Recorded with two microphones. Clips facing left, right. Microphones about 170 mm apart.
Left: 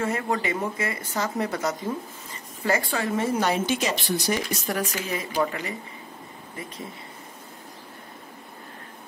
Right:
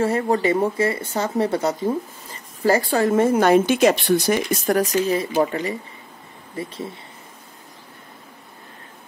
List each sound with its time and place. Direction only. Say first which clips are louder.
0.0 s speech: right 7 dB; 35° right (ahead or behind)